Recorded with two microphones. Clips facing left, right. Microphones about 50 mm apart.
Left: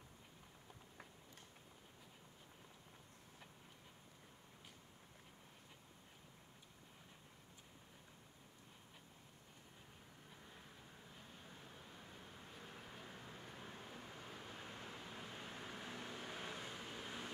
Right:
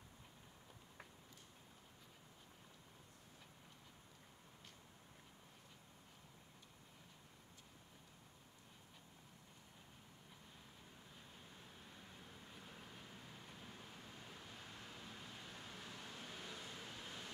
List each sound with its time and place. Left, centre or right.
13.7 s vehicle: left